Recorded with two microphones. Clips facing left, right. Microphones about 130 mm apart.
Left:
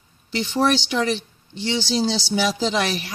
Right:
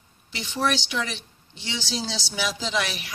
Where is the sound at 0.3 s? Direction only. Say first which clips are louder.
Left 6 dB; 30° left (ahead or behind).